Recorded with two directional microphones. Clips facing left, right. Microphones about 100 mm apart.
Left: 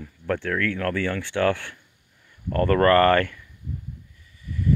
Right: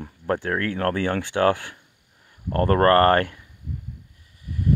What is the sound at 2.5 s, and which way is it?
Speech, 35° right (ahead or behind).